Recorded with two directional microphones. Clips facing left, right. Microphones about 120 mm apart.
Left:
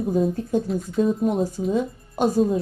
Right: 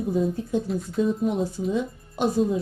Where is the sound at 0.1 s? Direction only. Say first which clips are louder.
Left 3 dB; 45° left (ahead or behind).